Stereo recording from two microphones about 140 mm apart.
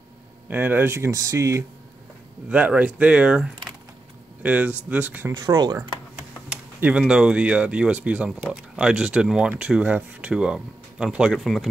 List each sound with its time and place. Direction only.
0.5 s speech: 15° right (ahead or behind)
2.5 s speech: 10° right (ahead or behind)
5.3 s speech: 30° right (ahead or behind)
5.8 s speech: 10° right (ahead or behind)